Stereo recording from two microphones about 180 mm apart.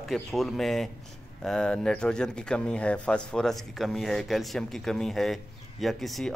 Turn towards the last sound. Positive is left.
turn(degrees=0)  # may be behind; listen again after turning